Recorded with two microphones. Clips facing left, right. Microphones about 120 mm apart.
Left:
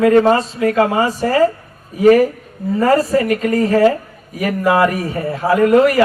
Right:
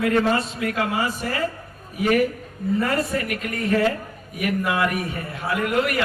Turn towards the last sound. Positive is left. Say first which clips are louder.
# left 11 dB
turn(degrees=40)  # may be behind; listen again after turning